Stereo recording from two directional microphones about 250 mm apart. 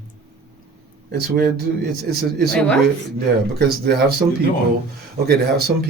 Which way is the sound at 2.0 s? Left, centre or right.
Right.